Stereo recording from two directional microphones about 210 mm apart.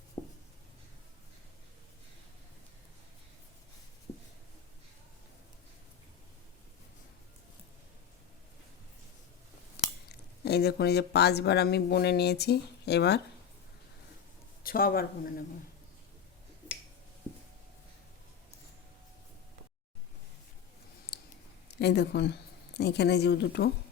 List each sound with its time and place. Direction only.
0.2 s writing: 35° left (ahead or behind)
9.7 s speech: 50° left (ahead or behind)
14.6 s a man's voice: 45° left (ahead or behind)
21.1 s a sound: 50° left (ahead or behind)
21.7 s speech: 55° left (ahead or behind)